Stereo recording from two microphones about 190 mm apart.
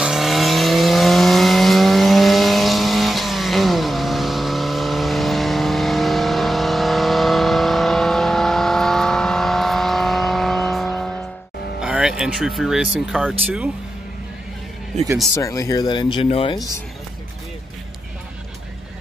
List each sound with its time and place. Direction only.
0.0 s vehicle: centre (ahead or behind)
11.8 s speech: 5° right (ahead or behind)
15.3 s speech: 15° left (ahead or behind)